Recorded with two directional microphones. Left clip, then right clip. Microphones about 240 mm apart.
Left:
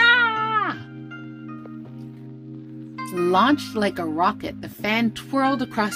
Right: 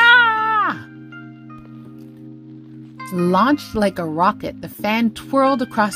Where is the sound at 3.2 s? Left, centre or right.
Centre.